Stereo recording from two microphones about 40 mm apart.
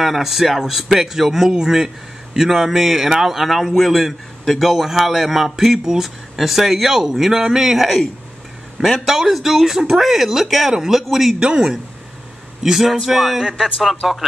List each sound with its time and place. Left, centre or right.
0.0 s a man's voice: centre
11.3 s speech: right
12.6 s a man's voice: centre